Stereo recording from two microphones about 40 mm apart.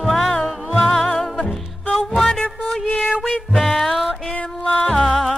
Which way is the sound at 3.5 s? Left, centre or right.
Centre.